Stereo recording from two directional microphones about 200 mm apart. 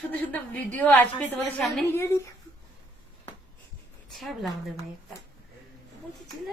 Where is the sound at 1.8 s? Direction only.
15° left (ahead or behind).